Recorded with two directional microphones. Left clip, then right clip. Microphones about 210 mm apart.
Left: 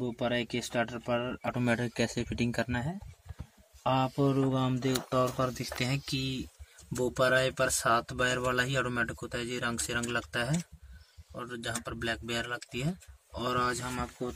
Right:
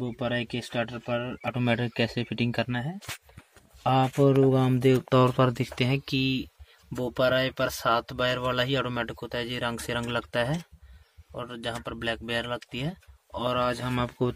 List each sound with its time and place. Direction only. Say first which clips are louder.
0.0 s speech: right 2 dB; 20° right (ahead or behind)
3.8 s speech: right 6 dB; 40° right (ahead or behind)
13.9 s speech: right 8 dB; 40° right (ahead or behind)